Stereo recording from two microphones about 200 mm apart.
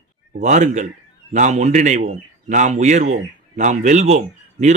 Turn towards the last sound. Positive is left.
turn(degrees=-35)  # may be behind; listen again after turning